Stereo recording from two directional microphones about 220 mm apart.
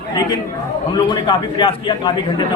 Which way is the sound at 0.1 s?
20° left (ahead or behind).